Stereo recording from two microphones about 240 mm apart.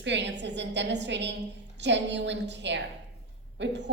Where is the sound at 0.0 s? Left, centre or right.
Right.